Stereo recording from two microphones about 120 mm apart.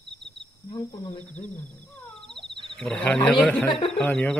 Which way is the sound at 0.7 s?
35° left (ahead or behind).